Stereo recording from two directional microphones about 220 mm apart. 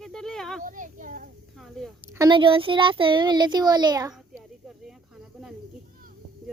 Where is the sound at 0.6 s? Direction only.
35° right (ahead or behind).